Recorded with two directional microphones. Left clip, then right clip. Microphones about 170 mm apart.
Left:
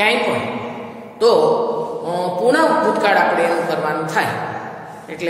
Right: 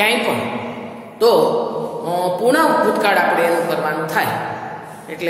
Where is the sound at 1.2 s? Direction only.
15° right (ahead or behind).